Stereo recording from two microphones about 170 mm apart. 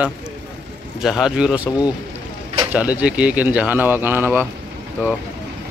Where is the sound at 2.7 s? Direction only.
10° right (ahead or behind).